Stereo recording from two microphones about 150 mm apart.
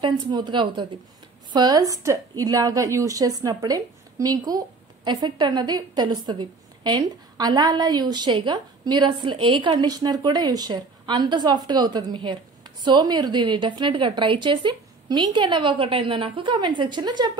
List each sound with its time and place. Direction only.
0.0 s a woman's voice: 30° right (ahead or behind)